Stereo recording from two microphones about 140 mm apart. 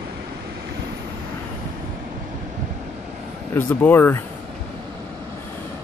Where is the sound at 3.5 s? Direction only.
15° left (ahead or behind).